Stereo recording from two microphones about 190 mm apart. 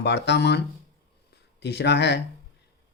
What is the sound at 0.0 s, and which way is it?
Speech, 65° left (ahead or behind).